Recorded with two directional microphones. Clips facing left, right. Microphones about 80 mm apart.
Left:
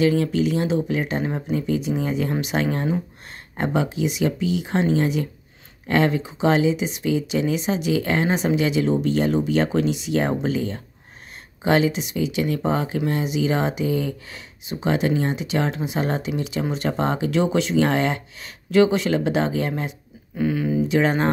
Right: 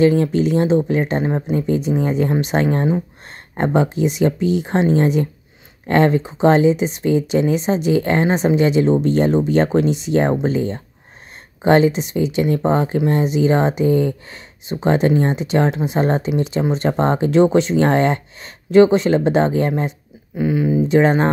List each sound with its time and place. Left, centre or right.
0.0 s speech: right
20.3 s speech: centre
20.9 s speech: right